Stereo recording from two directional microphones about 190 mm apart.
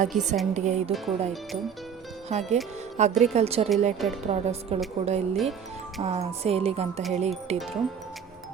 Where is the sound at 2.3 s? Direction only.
35° right (ahead or behind).